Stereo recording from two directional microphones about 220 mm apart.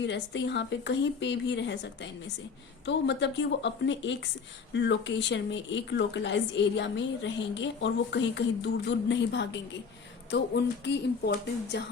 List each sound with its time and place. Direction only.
0.0 s speech: 55° left (ahead or behind)